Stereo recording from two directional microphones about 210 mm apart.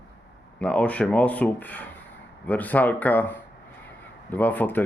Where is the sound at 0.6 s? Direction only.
5° left (ahead or behind).